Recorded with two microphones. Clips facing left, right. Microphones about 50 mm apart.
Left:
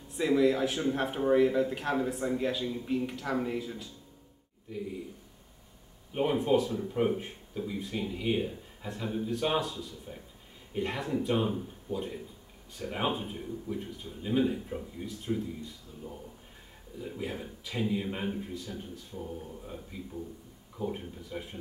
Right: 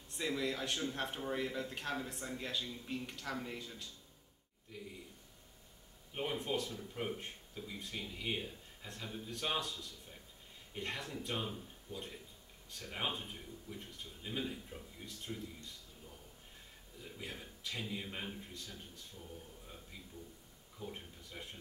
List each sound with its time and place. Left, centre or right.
0.1 s speech: centre
2.6 s speech: centre
2.9 s speech: centre
6.1 s speech: centre
6.7 s speech: left
15.0 s speech: centre
17.0 s speech: centre
19.3 s speech: left
19.9 s speech: centre